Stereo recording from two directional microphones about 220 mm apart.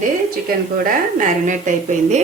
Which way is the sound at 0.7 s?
40° right (ahead or behind).